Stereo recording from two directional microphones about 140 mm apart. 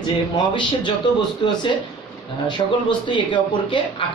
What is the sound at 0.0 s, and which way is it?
Speech, 35° left (ahead or behind).